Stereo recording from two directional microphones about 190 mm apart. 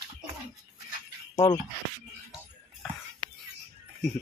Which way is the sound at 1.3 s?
20° left (ahead or behind).